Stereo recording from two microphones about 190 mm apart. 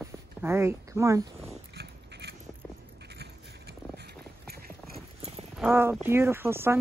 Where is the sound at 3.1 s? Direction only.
60° right (ahead or behind).